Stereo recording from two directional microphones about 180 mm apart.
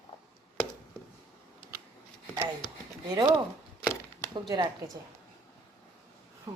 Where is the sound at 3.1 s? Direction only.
20° right (ahead or behind).